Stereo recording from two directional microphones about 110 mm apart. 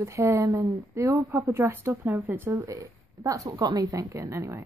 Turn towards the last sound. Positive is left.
turn(degrees=-25)  # may be behind; listen again after turning